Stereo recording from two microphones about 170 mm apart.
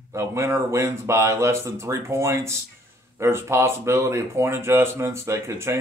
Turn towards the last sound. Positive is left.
turn(degrees=-15)  # may be behind; listen again after turning